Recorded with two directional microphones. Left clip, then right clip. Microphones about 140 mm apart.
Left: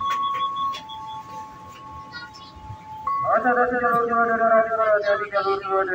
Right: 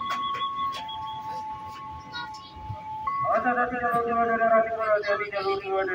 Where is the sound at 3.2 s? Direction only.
15° right (ahead or behind).